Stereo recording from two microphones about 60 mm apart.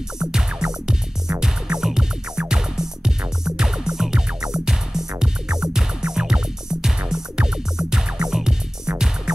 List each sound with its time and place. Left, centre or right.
0.2 s music: centre